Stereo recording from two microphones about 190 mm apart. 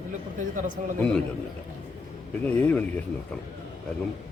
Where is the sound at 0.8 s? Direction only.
40° right (ahead or behind).